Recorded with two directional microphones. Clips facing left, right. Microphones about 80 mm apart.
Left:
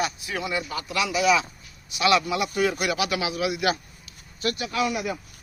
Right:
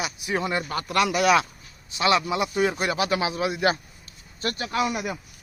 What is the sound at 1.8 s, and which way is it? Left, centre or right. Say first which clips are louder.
A man's voice: left 1 dB; right.